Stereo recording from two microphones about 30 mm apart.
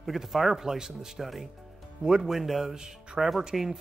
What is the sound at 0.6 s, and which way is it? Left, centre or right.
Speech, centre.